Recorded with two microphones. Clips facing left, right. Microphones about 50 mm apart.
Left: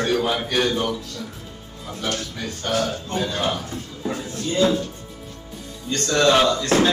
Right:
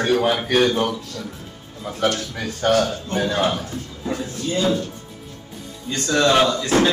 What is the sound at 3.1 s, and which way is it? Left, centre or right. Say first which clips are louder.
Speech: right 3 dB; right.